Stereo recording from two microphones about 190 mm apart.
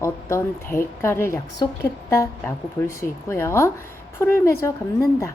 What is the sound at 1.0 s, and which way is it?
A woman's voice, 15° left (ahead or behind).